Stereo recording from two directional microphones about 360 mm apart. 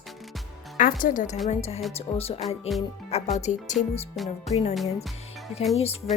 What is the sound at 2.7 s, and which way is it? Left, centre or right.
Speech, centre.